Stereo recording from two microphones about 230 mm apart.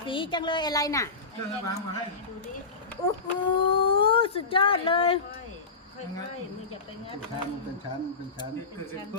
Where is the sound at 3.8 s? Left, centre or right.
Left.